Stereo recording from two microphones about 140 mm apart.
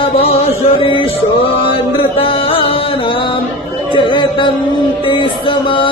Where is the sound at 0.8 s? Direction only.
35° left (ahead or behind).